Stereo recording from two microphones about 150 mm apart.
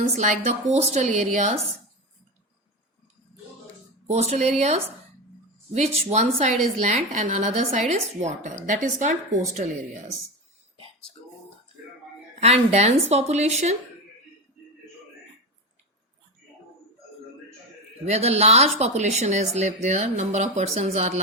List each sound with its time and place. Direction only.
0.2 s a woman's voice: 55° right (ahead or behind)
4.1 s a woman's voice: 45° right (ahead or behind)
12.4 s a woman's voice: 45° right (ahead or behind)
18.0 s a woman's voice: 45° right (ahead or behind)